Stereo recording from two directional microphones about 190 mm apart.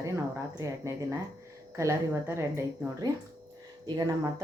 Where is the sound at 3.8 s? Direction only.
15° right (ahead or behind).